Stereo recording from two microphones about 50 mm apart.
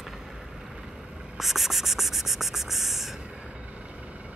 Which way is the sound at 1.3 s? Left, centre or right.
Centre.